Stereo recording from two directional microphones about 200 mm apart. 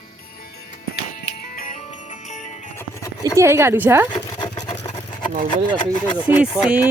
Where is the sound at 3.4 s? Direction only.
15° right (ahead or behind).